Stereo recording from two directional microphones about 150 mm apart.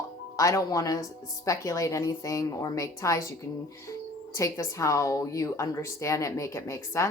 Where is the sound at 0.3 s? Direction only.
20° left (ahead or behind).